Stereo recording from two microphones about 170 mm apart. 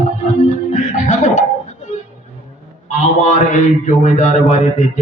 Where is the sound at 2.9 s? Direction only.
45° left (ahead or behind).